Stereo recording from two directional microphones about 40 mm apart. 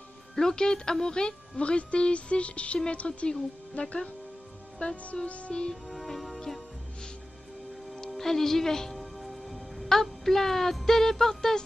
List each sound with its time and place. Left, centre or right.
0.4 s speech: centre
1.6 s speech: left
5.5 s speech: left
5.9 s music: centre
8.2 s speech: centre
8.9 s speech: centre